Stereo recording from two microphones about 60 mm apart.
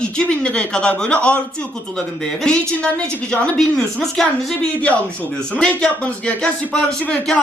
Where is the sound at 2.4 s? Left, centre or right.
Centre.